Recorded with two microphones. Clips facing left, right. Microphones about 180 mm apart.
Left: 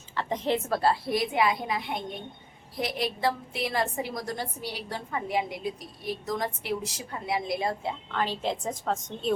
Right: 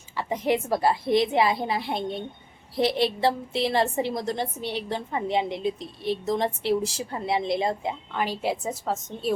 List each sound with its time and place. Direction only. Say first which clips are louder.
0.2 s a woman's voice: right 3 dB; 10° right (ahead or behind)